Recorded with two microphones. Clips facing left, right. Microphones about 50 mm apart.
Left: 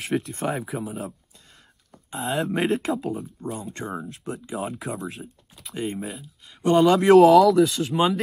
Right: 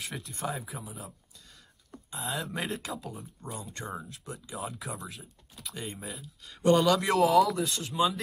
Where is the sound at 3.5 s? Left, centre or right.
Left.